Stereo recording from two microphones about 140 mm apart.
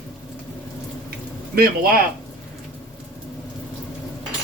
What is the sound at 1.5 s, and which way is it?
Speech, 90° right.